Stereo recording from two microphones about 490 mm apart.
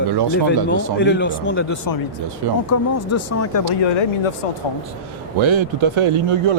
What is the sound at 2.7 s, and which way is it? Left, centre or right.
Speech, left.